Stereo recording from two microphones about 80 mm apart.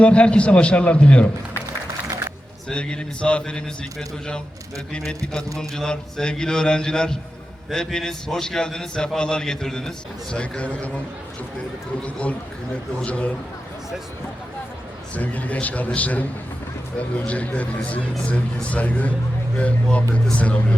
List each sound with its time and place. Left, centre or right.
0.0 s a man's voice: centre
2.0 s a sound: right
2.6 s a man's voice: centre
4.9 s a man's voice: centre
12.0 s a man's voice: centre
15.1 s a man's voice: centre